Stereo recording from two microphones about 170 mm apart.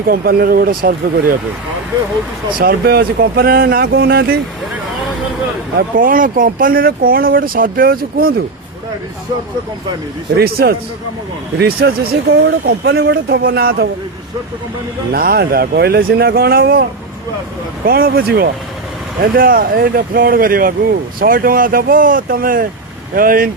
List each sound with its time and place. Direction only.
0.1 s speech: 60° right (ahead or behind)
2.6 s speech: 60° right (ahead or behind)
5.7 s speech: 55° right (ahead or behind)
10.3 s speech: 65° right (ahead or behind)
15.1 s speech: 65° right (ahead or behind)
17.8 s speech: 60° right (ahead or behind)